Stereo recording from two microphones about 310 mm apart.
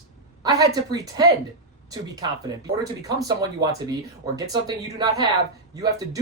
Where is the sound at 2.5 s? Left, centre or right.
Centre.